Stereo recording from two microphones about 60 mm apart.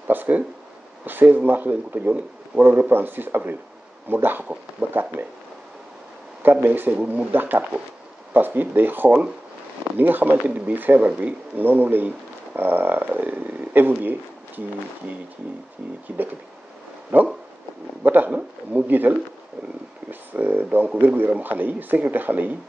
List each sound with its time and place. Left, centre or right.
0.1 s speech: right
6.4 s speech: right
7.0 s speech: right
7.3 s speech: right
17.1 s speech: right